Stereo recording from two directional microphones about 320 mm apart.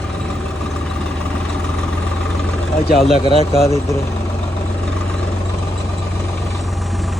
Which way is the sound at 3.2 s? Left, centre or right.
Centre.